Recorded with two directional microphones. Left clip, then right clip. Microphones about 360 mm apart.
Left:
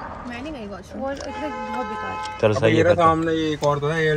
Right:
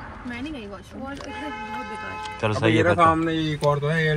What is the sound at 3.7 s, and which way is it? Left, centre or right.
Speech, left.